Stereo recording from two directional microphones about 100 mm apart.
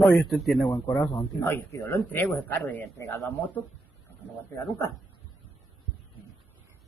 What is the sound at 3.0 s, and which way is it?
Speech, 25° left (ahead or behind).